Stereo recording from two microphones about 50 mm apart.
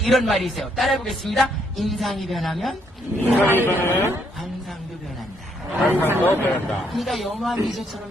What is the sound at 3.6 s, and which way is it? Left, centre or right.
Speech, left.